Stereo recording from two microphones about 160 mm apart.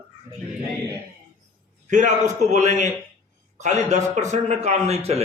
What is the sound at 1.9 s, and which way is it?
A man's voice, 50° right (ahead or behind).